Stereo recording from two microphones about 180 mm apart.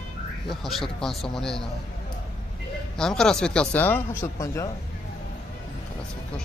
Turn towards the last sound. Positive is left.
turn(degrees=15)  # may be behind; listen again after turning